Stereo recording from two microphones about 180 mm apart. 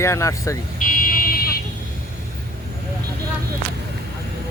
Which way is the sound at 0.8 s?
50° left (ahead or behind).